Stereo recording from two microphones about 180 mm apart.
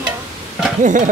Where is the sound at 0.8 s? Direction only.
45° right (ahead or behind).